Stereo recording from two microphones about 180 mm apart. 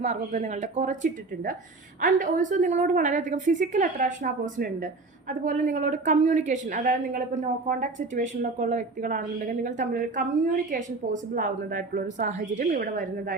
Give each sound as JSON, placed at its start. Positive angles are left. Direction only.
{"t": 0.0, "sound": "a woman's voice", "side_deg": -40}